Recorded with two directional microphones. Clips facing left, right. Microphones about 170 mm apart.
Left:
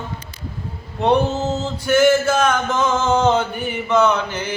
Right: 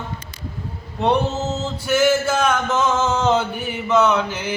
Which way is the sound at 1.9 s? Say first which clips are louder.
Left 3 dB; 5° right (ahead or behind).